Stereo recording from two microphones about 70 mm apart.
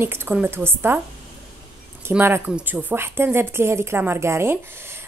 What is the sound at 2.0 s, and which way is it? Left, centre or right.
Speech, right.